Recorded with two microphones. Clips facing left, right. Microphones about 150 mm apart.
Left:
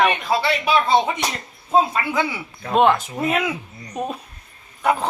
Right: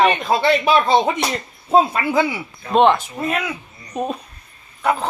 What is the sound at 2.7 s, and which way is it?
Speech, 5° left (ahead or behind).